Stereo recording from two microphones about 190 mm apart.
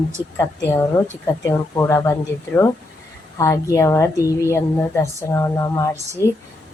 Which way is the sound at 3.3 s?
15° left (ahead or behind).